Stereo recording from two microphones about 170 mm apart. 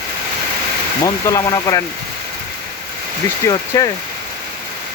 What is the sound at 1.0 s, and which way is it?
Speech, 20° left (ahead or behind).